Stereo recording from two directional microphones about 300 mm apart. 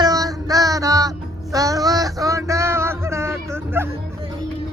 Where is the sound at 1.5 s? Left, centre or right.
Centre.